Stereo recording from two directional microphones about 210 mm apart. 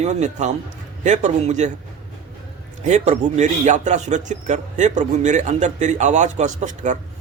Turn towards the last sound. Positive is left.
turn(degrees=-35)  # may be behind; listen again after turning